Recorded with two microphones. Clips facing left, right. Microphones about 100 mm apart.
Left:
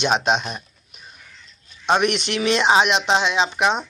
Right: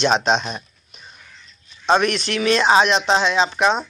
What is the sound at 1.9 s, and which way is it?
Speech, 15° left (ahead or behind).